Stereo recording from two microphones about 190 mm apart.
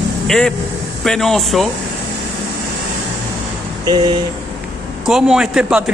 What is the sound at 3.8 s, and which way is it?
Speech, 25° right (ahead or behind).